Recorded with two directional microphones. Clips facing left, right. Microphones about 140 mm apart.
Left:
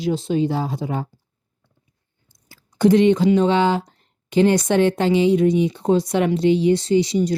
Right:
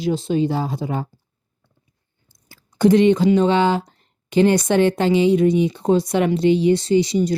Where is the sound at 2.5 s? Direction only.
45° right (ahead or behind).